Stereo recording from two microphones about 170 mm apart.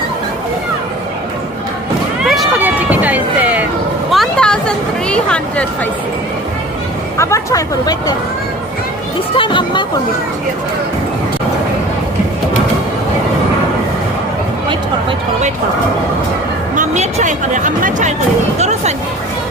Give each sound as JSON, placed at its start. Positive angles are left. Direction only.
{"t": 2.2, "sound": "run", "side_deg": 0}
{"t": 4.1, "sound": "a sound", "side_deg": 5}
{"t": 7.2, "sound": "speech", "side_deg": 15}
{"t": 9.3, "sound": "speech", "side_deg": 30}
{"t": 16.7, "sound": "speech", "side_deg": -45}